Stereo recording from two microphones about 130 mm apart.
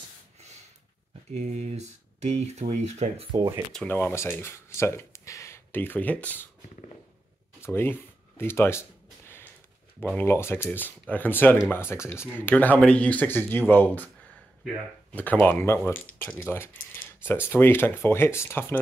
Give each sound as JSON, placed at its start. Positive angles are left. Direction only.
{"t": 1.3, "sound": "speech", "side_deg": -60}
{"t": 3.7, "sound": "speech", "side_deg": 15}
{"t": 7.6, "sound": "speech", "side_deg": 20}
{"t": 10.1, "sound": "speech", "side_deg": 20}
{"t": 15.1, "sound": "speech", "side_deg": 10}